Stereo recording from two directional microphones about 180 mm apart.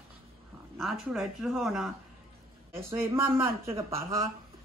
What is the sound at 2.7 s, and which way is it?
Speech, 15° right (ahead or behind).